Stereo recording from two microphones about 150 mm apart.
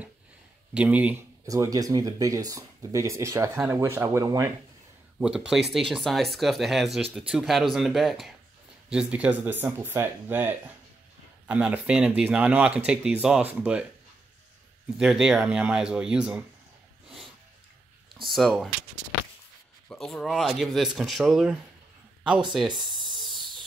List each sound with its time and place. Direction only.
0.7 s speech: 10° right (ahead or behind)
5.2 s speech: 5° right (ahead or behind)
15.0 s speech: 5° right (ahead or behind)
18.2 s speech: centre (ahead or behind)
19.9 s speech: centre (ahead or behind)
23.1 s a sound: centre (ahead or behind)